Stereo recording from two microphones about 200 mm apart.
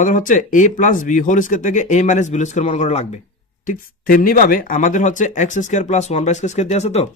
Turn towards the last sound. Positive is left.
turn(degrees=35)  # may be behind; listen again after turning